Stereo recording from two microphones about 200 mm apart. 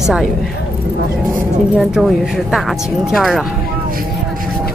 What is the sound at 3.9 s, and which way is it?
Vehicle, 45° right (ahead or behind).